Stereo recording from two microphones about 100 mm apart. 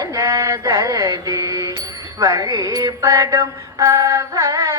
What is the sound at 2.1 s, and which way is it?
Music, 35° right (ahead or behind).